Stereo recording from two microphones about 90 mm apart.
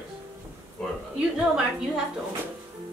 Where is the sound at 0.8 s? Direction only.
10° left (ahead or behind).